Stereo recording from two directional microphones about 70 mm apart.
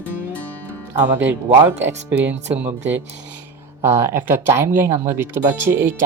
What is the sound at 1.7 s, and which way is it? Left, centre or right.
Speech, right.